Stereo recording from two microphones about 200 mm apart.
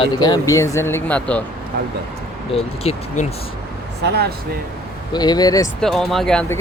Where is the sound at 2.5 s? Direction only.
35° left (ahead or behind).